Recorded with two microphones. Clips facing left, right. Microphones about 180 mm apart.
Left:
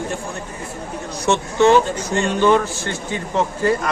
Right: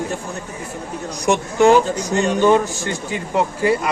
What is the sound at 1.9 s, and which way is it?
Speech, 40° right (ahead or behind).